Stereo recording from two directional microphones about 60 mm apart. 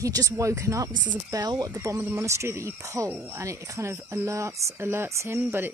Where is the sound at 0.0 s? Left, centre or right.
Right.